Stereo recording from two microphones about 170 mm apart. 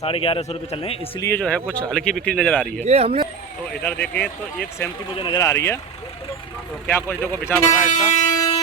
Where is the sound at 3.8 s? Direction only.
10° left (ahead or behind).